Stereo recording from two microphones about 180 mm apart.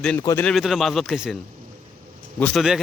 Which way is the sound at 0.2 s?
15° left (ahead or behind).